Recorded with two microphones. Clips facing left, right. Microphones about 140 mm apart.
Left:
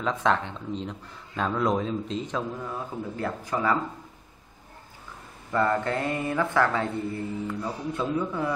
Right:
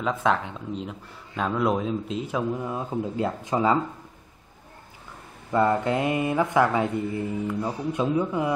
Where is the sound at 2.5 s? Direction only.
20° right (ahead or behind).